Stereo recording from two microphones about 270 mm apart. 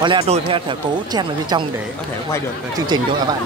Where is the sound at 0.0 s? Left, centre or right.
Centre.